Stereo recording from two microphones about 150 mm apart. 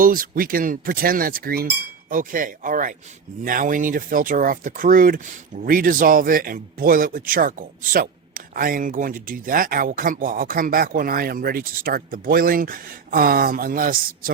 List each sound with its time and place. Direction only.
0.0 s speech: 70° right (ahead or behind)
2.0 s speech: 65° right (ahead or behind)